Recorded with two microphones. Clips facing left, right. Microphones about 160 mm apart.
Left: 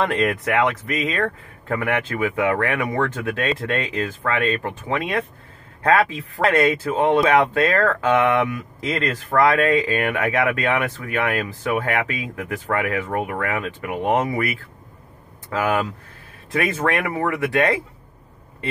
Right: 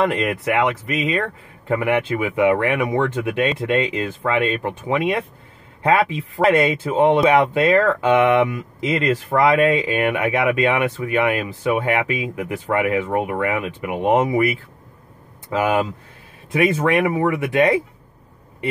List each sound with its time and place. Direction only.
0.0 s speech: 10° right (ahead or behind)
15.5 s speech: 15° right (ahead or behind)